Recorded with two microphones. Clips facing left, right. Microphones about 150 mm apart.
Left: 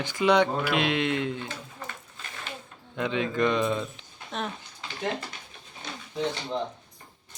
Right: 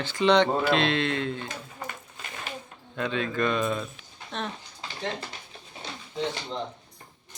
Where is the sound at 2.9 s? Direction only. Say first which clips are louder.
Left 1 dB; 15° left (ahead or behind).